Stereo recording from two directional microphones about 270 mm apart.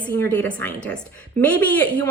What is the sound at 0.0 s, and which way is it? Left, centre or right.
A woman's voice, centre.